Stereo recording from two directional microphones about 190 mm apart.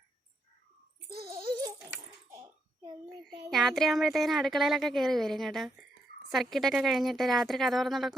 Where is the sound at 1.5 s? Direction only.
20° right (ahead or behind).